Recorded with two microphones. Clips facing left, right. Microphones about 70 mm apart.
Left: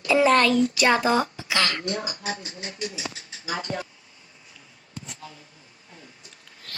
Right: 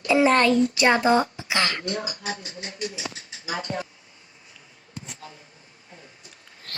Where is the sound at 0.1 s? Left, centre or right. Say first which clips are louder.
Even; right.